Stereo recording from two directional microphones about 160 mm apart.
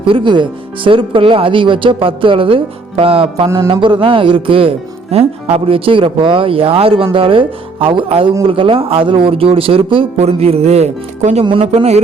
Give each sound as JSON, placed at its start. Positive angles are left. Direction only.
{"t": 0.1, "sound": "speech", "side_deg": -30}